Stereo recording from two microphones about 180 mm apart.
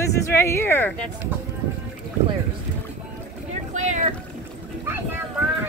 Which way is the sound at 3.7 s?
40° right (ahead or behind).